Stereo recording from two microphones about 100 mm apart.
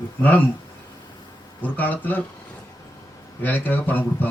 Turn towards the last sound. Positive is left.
turn(degrees=15)  # may be behind; listen again after turning